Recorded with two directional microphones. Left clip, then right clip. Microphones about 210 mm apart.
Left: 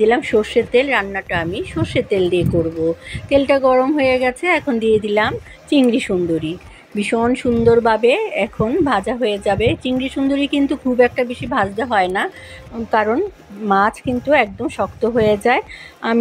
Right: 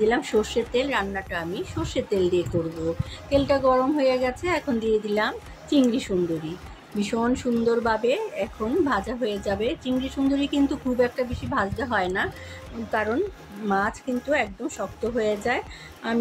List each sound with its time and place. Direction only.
0.0 s a woman's voice: 20° left (ahead or behind)